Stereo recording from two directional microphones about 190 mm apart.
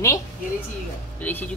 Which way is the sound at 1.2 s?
10° left (ahead or behind).